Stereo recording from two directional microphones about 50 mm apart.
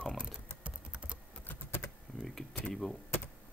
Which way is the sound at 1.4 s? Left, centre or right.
Left.